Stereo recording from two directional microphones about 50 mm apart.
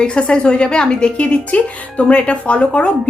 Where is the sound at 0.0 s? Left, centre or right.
Centre.